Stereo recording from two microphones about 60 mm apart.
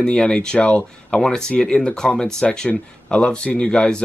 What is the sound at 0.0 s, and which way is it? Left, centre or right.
Speech, centre.